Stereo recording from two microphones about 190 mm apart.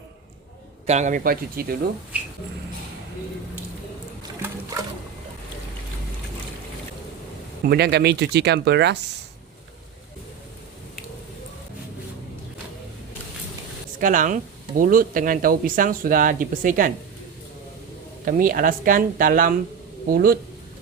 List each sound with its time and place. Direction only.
0.9 s speech: 40° right (ahead or behind)
2.1 s a sound: 5° right (ahead or behind)
4.4 s a sound: 15° right (ahead or behind)
7.7 s speech: 60° right (ahead or behind)
14.0 s speech: 45° right (ahead or behind)
18.3 s speech: 45° right (ahead or behind)